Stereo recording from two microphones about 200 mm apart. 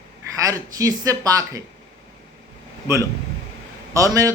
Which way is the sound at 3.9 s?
15° right (ahead or behind).